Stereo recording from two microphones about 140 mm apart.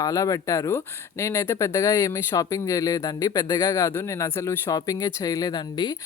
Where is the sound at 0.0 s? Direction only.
25° left (ahead or behind).